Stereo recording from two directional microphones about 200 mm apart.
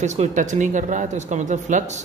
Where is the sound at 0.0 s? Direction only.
35° right (ahead or behind).